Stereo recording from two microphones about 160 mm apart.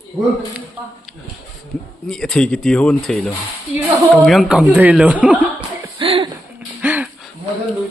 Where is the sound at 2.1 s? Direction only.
5° left (ahead or behind).